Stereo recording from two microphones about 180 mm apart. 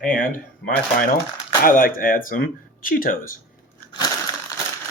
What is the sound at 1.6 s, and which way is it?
Speech, 50° left (ahead or behind).